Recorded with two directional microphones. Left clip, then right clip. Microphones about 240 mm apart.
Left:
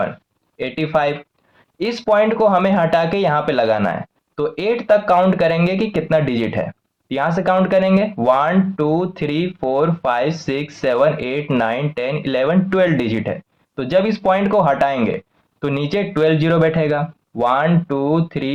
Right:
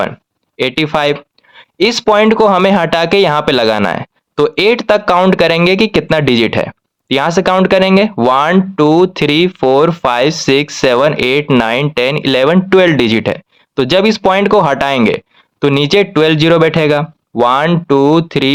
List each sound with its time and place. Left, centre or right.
0.5 s speech: right